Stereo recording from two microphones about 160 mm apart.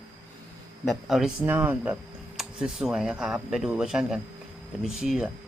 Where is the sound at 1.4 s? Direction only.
10° right (ahead or behind).